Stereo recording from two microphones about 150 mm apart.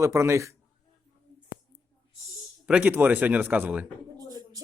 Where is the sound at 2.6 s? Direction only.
10° right (ahead or behind).